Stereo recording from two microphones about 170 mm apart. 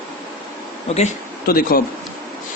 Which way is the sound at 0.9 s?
40° left (ahead or behind).